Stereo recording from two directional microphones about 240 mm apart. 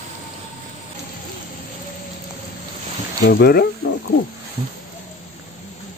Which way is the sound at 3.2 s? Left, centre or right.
Left.